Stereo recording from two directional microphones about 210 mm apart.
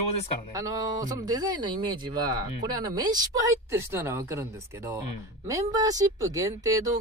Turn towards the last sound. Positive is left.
turn(degrees=-15)  # may be behind; listen again after turning